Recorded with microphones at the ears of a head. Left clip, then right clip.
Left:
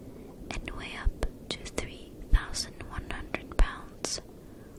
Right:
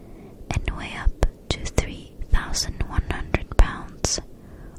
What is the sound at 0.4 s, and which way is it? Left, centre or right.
Whispering, right.